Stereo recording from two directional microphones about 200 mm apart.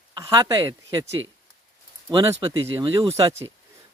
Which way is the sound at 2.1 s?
25° right (ahead or behind).